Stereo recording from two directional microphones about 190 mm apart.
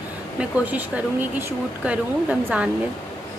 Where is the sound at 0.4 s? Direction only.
10° right (ahead or behind).